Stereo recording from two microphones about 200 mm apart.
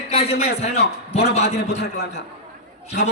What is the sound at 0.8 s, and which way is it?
Speech, 55° left (ahead or behind).